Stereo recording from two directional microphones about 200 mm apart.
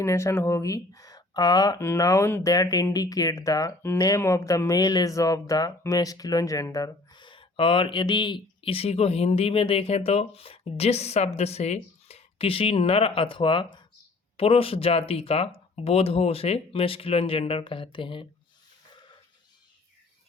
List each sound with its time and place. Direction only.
0.0 s speech: 15° left (ahead or behind)